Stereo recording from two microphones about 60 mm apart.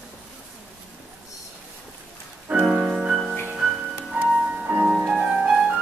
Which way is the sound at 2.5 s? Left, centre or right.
Right.